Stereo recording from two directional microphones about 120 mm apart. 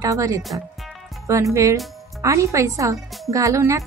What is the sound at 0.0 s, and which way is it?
Speech, 30° right (ahead or behind).